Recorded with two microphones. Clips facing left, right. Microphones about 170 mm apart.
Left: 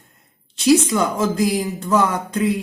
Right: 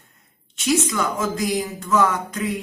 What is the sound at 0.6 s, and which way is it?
Speech, 35° left (ahead or behind).